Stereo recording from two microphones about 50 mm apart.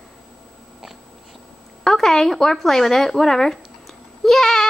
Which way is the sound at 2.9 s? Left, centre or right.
Centre.